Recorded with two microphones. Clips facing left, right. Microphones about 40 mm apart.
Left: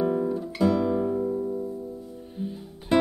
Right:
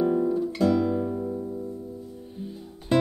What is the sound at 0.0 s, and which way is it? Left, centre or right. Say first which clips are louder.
Guitar: right 2 dB; centre.